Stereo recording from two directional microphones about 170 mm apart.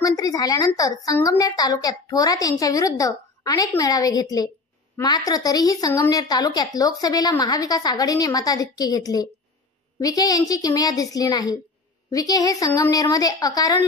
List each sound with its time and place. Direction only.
0.0 s a woman's voice: 20° left (ahead or behind)